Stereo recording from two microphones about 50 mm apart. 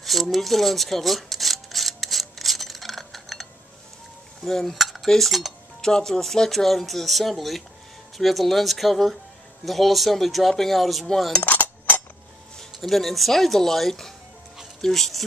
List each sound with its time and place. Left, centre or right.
0.0 s a sound: centre
4.5 s cutlery: centre
5.8 s speech: centre
11.4 s dishes: left
12.5 s speech: centre